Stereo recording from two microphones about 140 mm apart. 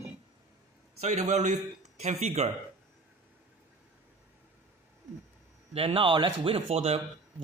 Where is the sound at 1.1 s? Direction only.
55° right (ahead or behind).